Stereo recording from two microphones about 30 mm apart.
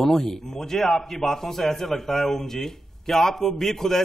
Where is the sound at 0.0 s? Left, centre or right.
Centre.